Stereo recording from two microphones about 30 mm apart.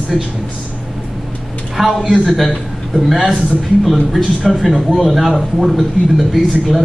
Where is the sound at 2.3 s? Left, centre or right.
Centre.